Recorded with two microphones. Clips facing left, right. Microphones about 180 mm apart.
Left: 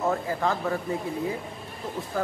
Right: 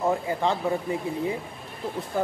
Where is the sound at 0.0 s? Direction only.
15° right (ahead or behind).